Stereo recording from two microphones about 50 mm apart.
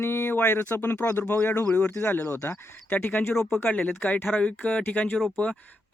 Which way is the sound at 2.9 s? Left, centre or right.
Left.